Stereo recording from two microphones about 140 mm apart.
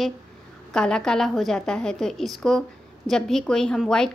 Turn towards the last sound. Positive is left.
turn(degrees=5)  # may be behind; listen again after turning